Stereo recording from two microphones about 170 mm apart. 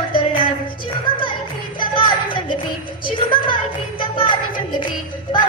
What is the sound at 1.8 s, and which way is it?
Music, 30° left (ahead or behind).